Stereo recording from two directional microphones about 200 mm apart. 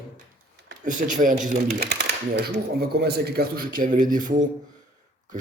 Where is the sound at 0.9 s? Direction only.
40° right (ahead or behind).